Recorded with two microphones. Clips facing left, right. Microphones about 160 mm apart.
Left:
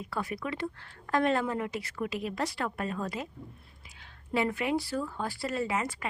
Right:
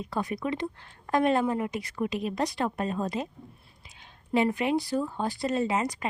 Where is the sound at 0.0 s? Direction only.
20° right (ahead or behind).